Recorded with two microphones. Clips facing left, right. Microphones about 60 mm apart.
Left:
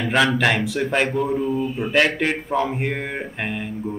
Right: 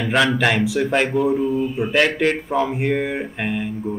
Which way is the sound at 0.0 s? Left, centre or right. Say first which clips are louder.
Right 1 dB; centre.